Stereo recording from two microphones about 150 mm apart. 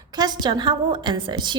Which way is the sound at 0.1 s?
25° right (ahead or behind).